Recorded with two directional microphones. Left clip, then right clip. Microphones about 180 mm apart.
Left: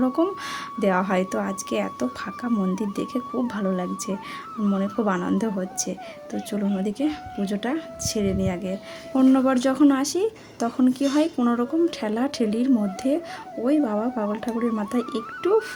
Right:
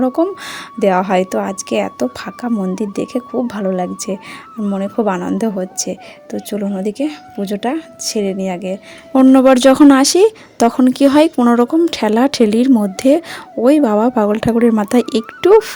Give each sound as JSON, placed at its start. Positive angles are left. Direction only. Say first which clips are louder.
{"t": 0.0, "sound": "speech", "louder": "right 7 dB", "side_deg": -35}
{"t": 9.1, "sound": "speech", "louder": "right 11 dB", "side_deg": -45}